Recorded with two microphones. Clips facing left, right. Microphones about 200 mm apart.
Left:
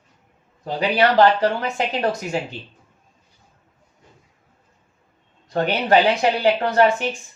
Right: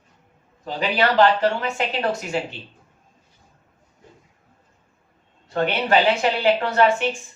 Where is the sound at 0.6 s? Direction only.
35° left (ahead or behind).